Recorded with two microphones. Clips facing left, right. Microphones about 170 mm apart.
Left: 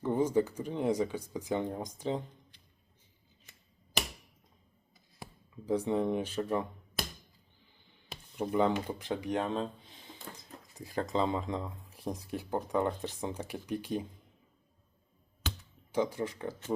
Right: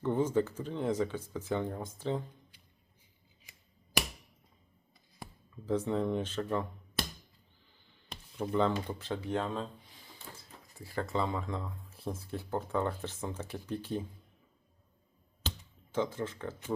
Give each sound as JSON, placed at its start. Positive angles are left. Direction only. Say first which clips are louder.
{"t": 0.0, "sound": "speech", "louder": "left 1 dB", "side_deg": 10}
{"t": 4.9, "sound": "a sound", "louder": "even", "side_deg": 0}
{"t": 5.6, "sound": "speech", "louder": "left 1 dB", "side_deg": 15}
{"t": 8.1, "sound": "speech", "louder": "left 1 dB", "side_deg": 10}
{"t": 15.9, "sound": "speech", "louder": "left 2 dB", "side_deg": 15}